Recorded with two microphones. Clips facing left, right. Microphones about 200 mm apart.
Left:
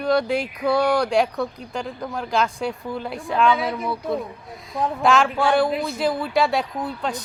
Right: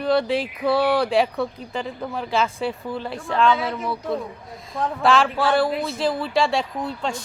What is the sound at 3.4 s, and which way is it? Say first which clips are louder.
Speech: even; 15° left (ahead or behind).